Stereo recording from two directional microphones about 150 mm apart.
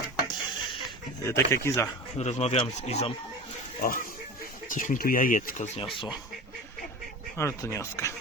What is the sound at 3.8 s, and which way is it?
Speech, 70° left (ahead or behind).